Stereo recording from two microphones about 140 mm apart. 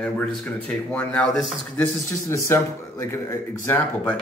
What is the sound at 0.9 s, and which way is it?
Speech, 5° left (ahead or behind).